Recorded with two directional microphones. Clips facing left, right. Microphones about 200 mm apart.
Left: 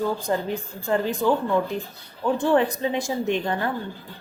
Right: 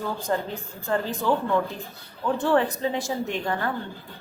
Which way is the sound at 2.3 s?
15° left (ahead or behind).